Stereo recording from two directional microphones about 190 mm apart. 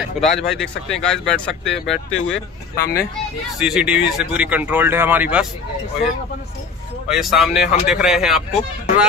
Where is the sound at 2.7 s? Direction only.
50° left (ahead or behind).